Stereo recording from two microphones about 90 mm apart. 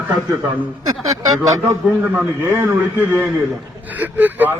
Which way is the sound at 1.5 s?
35° right (ahead or behind).